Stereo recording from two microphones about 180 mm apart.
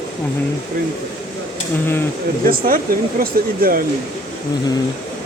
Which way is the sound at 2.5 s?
50° right (ahead or behind).